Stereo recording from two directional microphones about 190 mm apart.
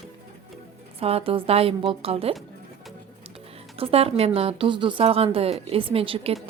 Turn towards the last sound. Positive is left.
turn(degrees=-30)  # may be behind; listen again after turning